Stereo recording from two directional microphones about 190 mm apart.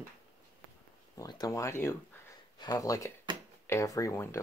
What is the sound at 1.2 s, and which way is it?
Speech, 20° left (ahead or behind).